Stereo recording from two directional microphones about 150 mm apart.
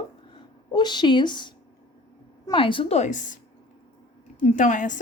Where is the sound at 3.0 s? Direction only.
55° left (ahead or behind).